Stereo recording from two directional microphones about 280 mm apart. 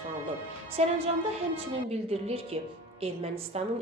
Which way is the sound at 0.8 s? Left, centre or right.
Right.